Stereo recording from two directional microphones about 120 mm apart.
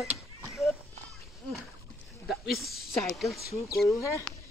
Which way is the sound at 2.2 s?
Centre (ahead or behind).